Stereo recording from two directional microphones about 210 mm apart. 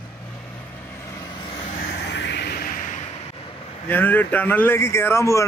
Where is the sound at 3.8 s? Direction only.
10° left (ahead or behind).